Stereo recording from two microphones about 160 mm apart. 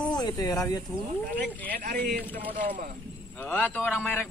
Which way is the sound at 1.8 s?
70° right (ahead or behind).